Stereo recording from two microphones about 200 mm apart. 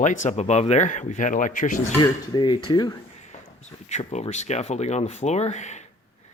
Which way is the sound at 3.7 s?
35° left (ahead or behind).